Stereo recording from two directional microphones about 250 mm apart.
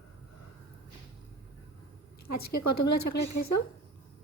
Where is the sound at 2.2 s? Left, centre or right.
Left.